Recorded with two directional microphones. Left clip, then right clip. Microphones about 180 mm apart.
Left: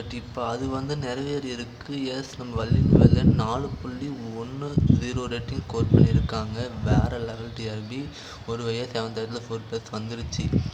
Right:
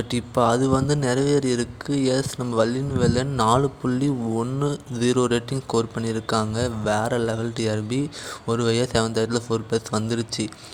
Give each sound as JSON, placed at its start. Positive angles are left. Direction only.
{"t": 0.1, "sound": "speech", "side_deg": -40}